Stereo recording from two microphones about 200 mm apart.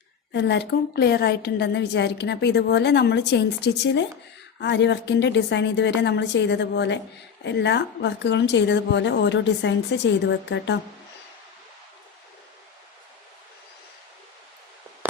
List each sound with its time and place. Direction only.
0.3 s a woman's voice: 60° left (ahead or behind)